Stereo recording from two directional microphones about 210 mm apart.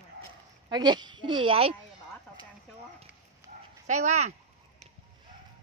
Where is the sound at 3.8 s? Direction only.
35° right (ahead or behind).